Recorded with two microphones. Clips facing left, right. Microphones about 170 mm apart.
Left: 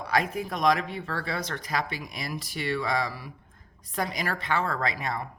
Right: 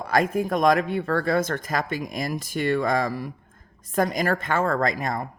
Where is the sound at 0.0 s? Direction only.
45° right (ahead or behind).